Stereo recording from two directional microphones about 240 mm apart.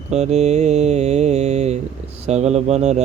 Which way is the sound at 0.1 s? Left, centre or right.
Right.